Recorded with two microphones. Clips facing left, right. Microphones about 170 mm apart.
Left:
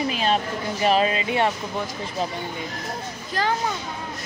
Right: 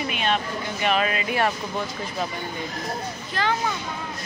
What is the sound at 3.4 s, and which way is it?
Speech, 40° left (ahead or behind).